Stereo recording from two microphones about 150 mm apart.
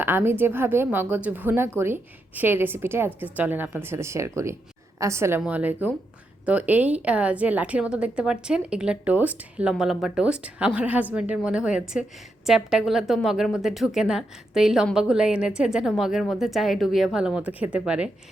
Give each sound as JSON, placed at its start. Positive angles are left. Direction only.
{"t": 0.0, "sound": "a woman's voice", "side_deg": -15}